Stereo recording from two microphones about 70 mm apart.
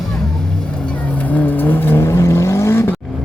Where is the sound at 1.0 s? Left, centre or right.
Left.